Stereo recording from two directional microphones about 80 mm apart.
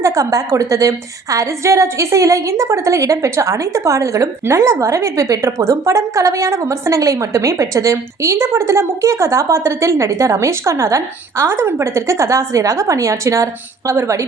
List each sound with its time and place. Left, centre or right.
0.0 s a woman's voice: right